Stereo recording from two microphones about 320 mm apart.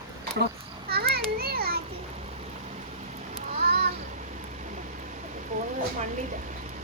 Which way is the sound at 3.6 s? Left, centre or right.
Right.